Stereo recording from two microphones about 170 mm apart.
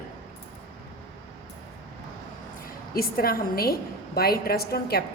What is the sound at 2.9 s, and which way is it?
A woman's voice, 60° left (ahead or behind).